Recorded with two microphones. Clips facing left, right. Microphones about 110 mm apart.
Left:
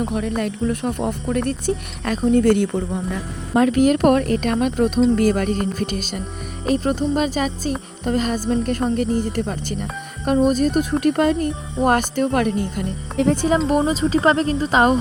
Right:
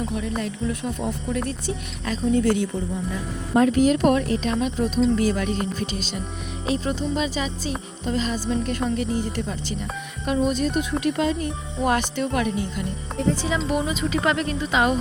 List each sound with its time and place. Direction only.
0.0 s speech: 55° left (ahead or behind)
13.7 s speech: 40° left (ahead or behind)